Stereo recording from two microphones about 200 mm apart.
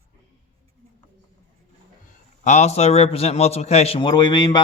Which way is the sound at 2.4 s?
35° left (ahead or behind).